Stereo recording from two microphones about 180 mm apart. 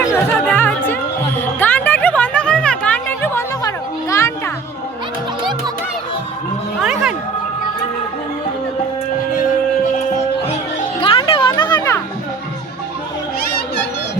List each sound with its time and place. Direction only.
0.0 s music: 15° left (ahead or behind)
5.4 s music: 25° right (ahead or behind)
6.7 s music: 5° right (ahead or behind)
11.0 s a sound: 30° left (ahead or behind)